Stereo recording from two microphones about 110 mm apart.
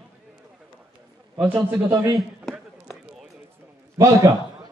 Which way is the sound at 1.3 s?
15° right (ahead or behind).